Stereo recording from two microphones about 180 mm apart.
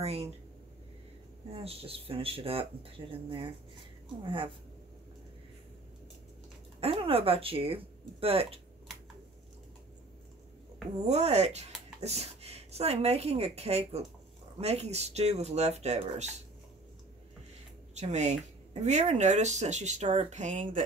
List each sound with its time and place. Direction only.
0.0 s speech: 35° right (ahead or behind)
1.5 s speech: 30° right (ahead or behind)
6.8 s speech: 30° right (ahead or behind)
11.1 s speech: 40° right (ahead or behind)
17.9 s speech: 40° right (ahead or behind)